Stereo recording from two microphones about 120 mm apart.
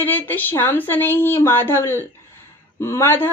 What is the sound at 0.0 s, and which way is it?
A woman's voice, 15° left (ahead or behind).